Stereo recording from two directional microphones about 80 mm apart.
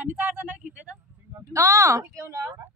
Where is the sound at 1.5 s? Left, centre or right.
Right.